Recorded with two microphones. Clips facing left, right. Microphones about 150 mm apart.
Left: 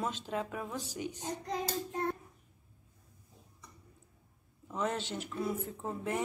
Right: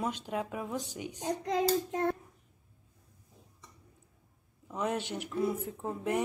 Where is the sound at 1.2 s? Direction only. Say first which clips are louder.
Right 10 dB; 90° right.